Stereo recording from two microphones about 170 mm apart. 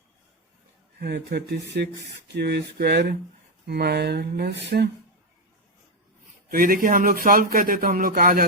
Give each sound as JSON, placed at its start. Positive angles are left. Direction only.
{"t": 0.9, "sound": "speech", "side_deg": -75}
{"t": 6.5, "sound": "speech", "side_deg": -55}